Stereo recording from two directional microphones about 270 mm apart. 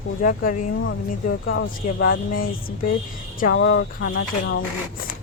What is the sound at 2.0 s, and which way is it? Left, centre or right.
Speech, left.